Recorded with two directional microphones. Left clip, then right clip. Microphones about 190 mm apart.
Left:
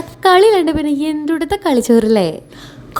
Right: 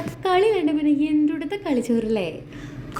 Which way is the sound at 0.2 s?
50° left (ahead or behind).